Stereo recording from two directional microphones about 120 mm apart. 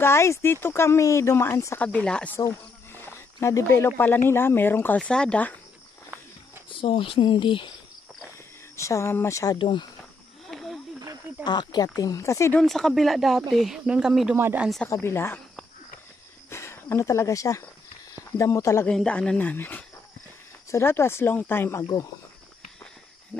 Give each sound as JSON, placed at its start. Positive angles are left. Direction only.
{"t": 0.0, "sound": "speech", "side_deg": 20}
{"t": 1.8, "sound": "speech", "side_deg": 10}
{"t": 2.3, "sound": "speech", "side_deg": 20}
{"t": 6.7, "sound": "speech", "side_deg": 45}
{"t": 8.7, "sound": "speech", "side_deg": 25}
{"t": 9.6, "sound": "speech", "side_deg": 45}
{"t": 10.5, "sound": "wild animals", "side_deg": 0}
{"t": 11.4, "sound": "speech", "side_deg": 35}
{"t": 12.5, "sound": "speech", "side_deg": 0}
{"t": 14.3, "sound": "speech", "side_deg": -15}
{"t": 14.9, "sound": "speech", "side_deg": 20}
{"t": 16.4, "sound": "speech", "side_deg": 20}
{"t": 18.9, "sound": "speech", "side_deg": 10}
{"t": 21.8, "sound": "speech", "side_deg": 35}